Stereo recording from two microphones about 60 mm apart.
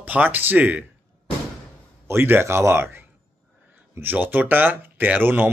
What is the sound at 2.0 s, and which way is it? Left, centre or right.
Speech, right.